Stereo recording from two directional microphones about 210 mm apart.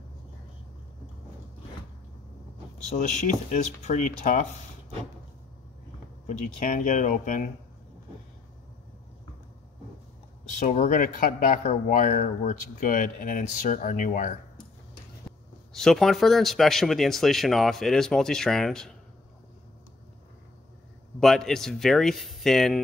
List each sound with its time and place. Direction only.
3.0 s speech: 35° left (ahead or behind)
6.2 s speech: 40° left (ahead or behind)
10.6 s speech: 35° left (ahead or behind)
15.7 s speech: centre (ahead or behind)
21.2 s speech: centre (ahead or behind)